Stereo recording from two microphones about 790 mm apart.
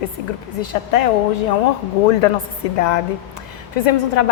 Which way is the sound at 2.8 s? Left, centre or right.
Left.